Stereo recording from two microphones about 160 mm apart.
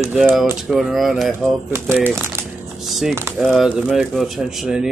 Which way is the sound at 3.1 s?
15° right (ahead or behind).